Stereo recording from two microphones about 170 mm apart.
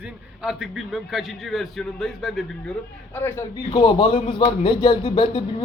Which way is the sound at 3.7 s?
30° left (ahead or behind).